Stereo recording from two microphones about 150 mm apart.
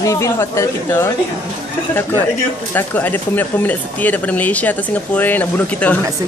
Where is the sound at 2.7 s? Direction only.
10° left (ahead or behind).